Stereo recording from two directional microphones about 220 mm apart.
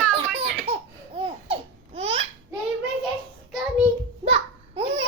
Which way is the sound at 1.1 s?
25° right (ahead or behind).